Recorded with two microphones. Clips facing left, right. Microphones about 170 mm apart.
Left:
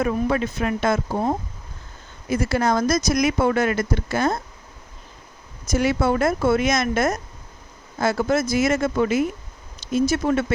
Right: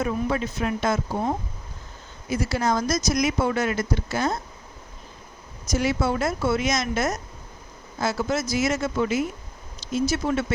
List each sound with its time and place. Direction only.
0.0 s speech: 65° left (ahead or behind)
2.3 s speech: 55° left (ahead or behind)
5.6 s speech: 55° left (ahead or behind)